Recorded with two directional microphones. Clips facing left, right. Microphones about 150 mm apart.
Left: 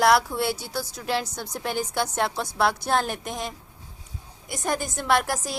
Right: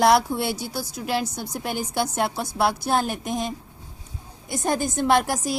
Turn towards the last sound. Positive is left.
turn(degrees=-15)  # may be behind; listen again after turning